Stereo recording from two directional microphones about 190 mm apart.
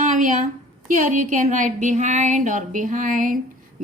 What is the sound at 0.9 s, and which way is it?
Speech, 40° right (ahead or behind).